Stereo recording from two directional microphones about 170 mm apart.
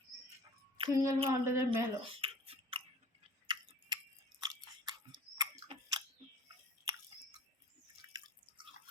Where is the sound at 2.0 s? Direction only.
30° right (ahead or behind).